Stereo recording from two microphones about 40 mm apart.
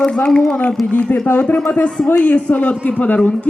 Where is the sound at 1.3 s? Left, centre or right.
Left.